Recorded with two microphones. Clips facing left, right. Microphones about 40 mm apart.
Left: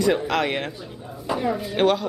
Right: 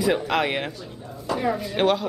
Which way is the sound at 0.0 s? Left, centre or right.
Centre.